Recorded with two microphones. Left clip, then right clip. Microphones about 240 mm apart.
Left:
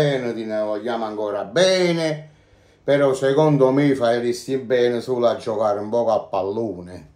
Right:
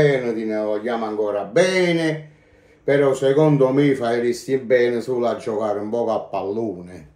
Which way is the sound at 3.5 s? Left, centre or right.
Left.